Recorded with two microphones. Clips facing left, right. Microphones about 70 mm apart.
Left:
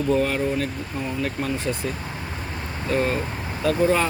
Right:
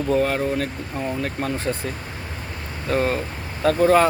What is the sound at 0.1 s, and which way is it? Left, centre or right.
Speech, right.